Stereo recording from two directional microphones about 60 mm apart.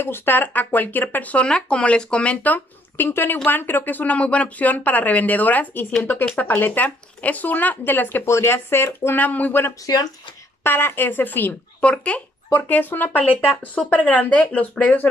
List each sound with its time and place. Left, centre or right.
0.0 s speech: left
8.3 s speech: left
9.2 s speech: left
11.8 s speech: centre
12.5 s speech: left